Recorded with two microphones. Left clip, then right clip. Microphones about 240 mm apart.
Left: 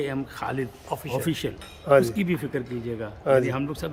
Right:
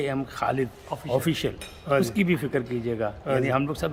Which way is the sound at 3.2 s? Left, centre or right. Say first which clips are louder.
Left 7 dB; left.